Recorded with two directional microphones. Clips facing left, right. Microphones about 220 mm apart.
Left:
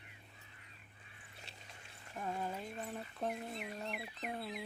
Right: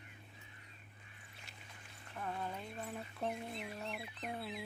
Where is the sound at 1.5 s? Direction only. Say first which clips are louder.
Left 1 dB; 30° left (ahead or behind).